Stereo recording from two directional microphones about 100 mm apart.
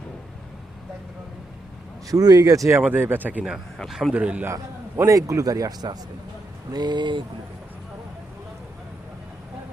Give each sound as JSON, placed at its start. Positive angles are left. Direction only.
{"t": 2.0, "sound": "a man's voice", "side_deg": -40}
{"t": 2.8, "sound": "speech", "side_deg": -20}
{"t": 3.8, "sound": "a man's voice", "side_deg": 0}
{"t": 4.1, "sound": "speech", "side_deg": -15}
{"t": 4.4, "sound": "a man's voice", "side_deg": -30}